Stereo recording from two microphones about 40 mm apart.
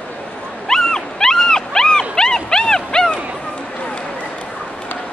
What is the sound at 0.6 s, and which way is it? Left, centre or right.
Dog, centre.